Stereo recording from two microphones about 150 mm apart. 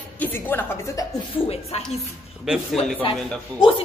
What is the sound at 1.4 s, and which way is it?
Music, 40° left (ahead or behind).